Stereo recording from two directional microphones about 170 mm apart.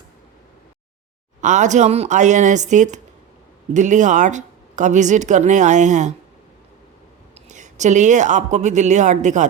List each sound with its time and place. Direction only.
1.4 s a woman's voice: 45° right (ahead or behind)
7.3 s speech: 45° right (ahead or behind)